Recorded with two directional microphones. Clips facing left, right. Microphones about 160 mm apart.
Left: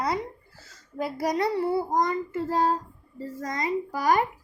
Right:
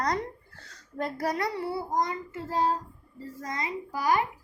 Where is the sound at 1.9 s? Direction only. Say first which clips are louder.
Left 4 dB; 55° left (ahead or behind).